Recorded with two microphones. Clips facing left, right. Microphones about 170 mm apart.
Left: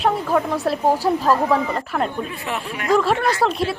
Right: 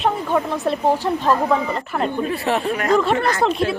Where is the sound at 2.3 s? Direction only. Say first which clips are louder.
Right 7 dB; 35° right (ahead or behind).